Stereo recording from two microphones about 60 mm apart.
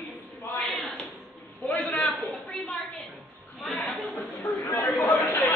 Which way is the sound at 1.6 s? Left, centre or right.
Left.